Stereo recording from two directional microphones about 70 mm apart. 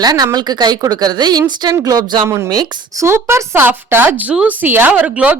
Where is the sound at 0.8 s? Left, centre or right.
Right.